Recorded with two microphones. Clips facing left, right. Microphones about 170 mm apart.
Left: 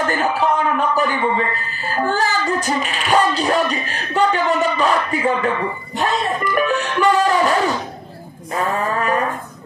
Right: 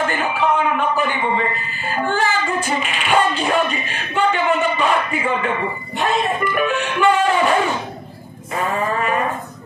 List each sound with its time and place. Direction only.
0.0 s a man's voice: 40° left (ahead or behind)